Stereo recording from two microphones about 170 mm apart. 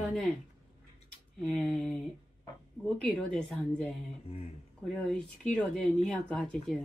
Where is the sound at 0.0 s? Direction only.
5° left (ahead or behind).